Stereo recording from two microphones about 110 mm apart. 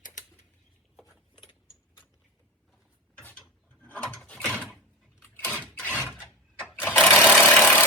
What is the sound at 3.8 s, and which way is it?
Gears, 15° left (ahead or behind).